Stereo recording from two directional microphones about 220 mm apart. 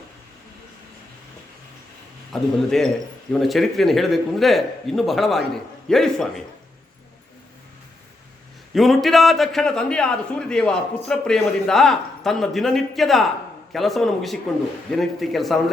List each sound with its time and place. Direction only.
2.3 s a man's voice: centre (ahead or behind)
8.7 s a man's voice: centre (ahead or behind)